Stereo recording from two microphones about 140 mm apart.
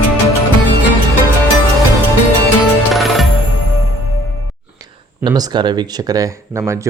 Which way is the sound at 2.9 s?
Centre (ahead or behind).